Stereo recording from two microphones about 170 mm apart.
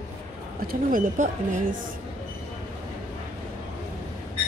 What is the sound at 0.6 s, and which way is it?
Speech, 55° right (ahead or behind).